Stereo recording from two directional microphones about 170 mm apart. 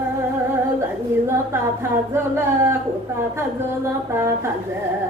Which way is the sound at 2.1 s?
15° right (ahead or behind).